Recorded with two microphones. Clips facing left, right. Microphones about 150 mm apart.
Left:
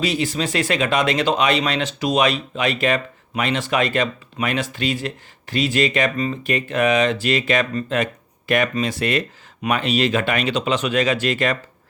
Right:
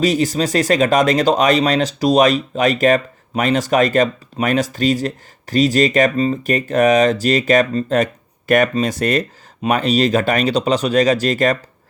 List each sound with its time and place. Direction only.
0.0 s speech: 40° right (ahead or behind)